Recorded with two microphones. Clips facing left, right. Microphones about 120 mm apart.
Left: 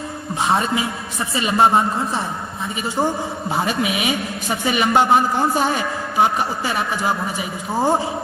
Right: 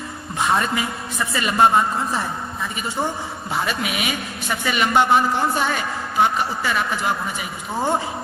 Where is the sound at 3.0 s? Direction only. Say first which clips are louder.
Left 4 dB; 10° left (ahead or behind).